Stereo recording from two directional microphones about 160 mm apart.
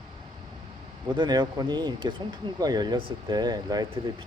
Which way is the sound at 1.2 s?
30° right (ahead or behind).